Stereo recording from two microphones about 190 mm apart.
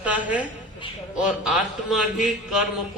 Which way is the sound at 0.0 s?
5° right (ahead or behind).